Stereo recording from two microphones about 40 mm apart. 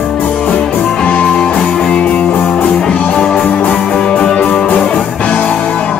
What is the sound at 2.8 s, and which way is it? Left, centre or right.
Music, left.